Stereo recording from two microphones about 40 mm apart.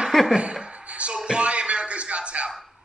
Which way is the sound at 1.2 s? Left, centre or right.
Right.